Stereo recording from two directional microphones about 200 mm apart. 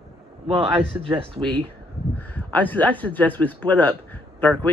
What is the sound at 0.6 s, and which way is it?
Speech, 5° right (ahead or behind).